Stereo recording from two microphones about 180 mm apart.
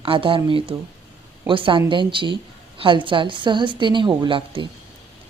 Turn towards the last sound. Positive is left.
turn(degrees=-25)  # may be behind; listen again after turning